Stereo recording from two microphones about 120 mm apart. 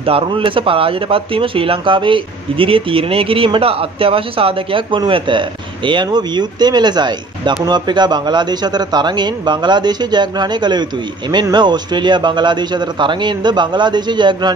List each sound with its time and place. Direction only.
0.0 s a man's voice: 50° right (ahead or behind)